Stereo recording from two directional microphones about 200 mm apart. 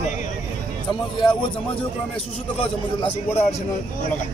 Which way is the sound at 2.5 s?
30° left (ahead or behind).